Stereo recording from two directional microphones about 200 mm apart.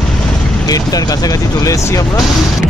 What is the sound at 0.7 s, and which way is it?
Speech, 20° left (ahead or behind).